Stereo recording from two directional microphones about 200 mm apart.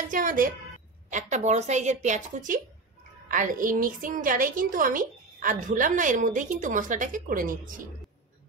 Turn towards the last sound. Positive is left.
turn(degrees=-45)  # may be behind; listen again after turning